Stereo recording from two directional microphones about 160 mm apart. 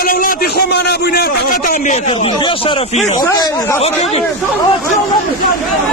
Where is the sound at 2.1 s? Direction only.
30° left (ahead or behind).